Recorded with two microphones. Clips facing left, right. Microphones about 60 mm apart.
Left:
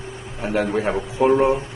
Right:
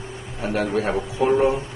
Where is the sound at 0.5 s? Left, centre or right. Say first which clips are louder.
Left 1 dB; centre.